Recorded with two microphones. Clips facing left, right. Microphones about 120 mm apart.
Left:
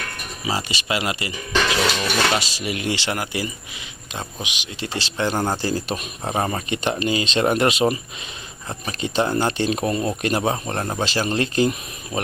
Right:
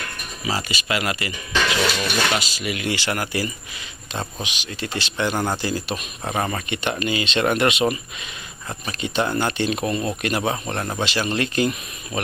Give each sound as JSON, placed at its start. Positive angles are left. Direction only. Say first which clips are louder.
{"t": 0.4, "sound": "speech", "louder": "even", "side_deg": 30}
{"t": 4.6, "sound": "speech", "louder": "even", "side_deg": 30}